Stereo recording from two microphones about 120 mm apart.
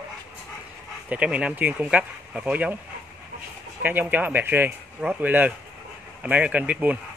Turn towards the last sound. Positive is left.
turn(degrees=-10)  # may be behind; listen again after turning